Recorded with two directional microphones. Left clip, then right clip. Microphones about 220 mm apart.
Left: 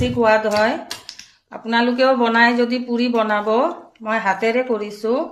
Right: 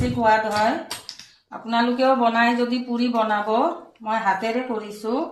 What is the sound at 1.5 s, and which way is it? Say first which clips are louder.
Speech: left 3 dB; 40° left (ahead or behind).